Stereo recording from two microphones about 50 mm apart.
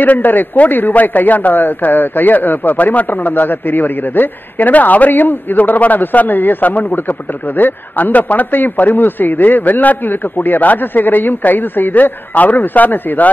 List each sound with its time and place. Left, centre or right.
0.0 s a man's voice: left